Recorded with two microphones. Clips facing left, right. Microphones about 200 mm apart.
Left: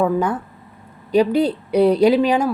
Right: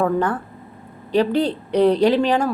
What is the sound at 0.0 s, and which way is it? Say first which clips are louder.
Speech: left 1 dB; 10° left (ahead or behind).